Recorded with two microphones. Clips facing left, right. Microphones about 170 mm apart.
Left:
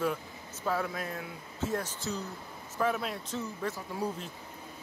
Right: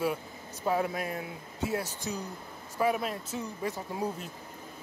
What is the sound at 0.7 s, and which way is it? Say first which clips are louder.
Speech: right 3 dB; 10° right (ahead or behind).